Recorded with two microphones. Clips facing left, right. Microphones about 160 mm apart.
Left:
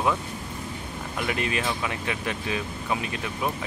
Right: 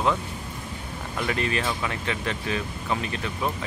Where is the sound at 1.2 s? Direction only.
15° left (ahead or behind).